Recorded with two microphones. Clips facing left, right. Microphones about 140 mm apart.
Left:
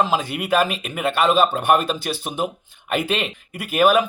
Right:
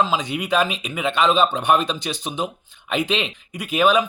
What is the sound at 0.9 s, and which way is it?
Speech, 5° left (ahead or behind).